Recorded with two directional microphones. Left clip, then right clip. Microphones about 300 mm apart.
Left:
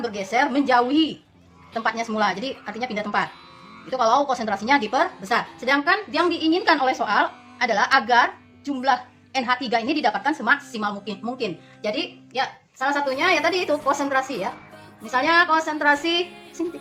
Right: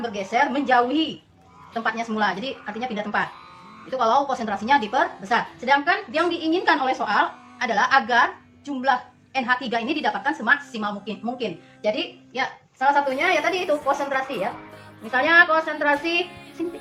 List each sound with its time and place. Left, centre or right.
0.0 s a woman's voice: left